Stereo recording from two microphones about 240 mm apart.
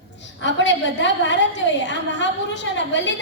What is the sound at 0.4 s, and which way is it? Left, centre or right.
A woman's voice, left.